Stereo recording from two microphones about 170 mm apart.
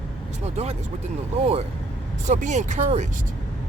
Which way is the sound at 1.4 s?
35° right (ahead or behind).